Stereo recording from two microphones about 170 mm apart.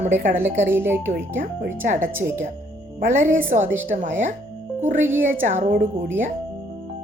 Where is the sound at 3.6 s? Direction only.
10° right (ahead or behind).